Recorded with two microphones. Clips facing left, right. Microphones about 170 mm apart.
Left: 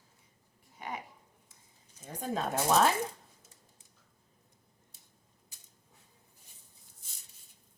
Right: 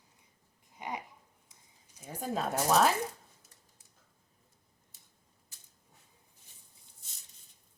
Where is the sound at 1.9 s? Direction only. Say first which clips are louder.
Even; 5° right (ahead or behind).